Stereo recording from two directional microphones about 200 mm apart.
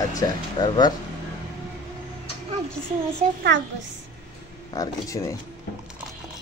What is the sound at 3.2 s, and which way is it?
Speech, 35° right (ahead or behind).